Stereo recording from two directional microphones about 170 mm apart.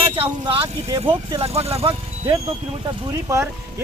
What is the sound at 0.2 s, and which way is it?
Speech, 30° right (ahead or behind).